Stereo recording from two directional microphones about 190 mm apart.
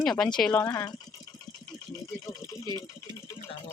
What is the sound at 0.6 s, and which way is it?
Speech, 20° left (ahead or behind).